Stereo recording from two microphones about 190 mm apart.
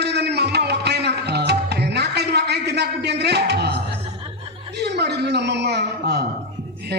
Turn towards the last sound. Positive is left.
turn(degrees=-60)  # may be behind; listen again after turning